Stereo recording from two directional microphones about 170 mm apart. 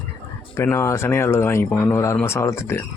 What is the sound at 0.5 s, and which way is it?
Speech, 15° left (ahead or behind).